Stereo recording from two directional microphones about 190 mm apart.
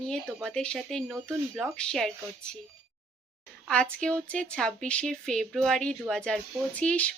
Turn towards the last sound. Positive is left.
turn(degrees=5)  # may be behind; listen again after turning